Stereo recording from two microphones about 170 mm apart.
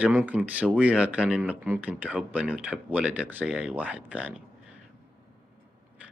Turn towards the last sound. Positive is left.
turn(degrees=-5)  # may be behind; listen again after turning